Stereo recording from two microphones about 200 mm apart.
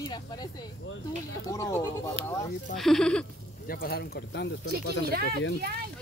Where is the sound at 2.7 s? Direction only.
Centre (ahead or behind).